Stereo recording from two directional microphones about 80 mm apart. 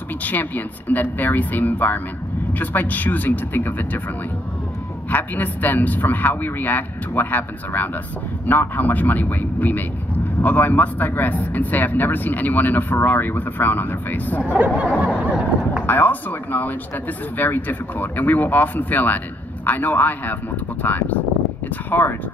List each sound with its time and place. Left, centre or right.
0.2 s speech: left
5.1 s speech: left
15.0 s speech: centre
15.9 s speech: left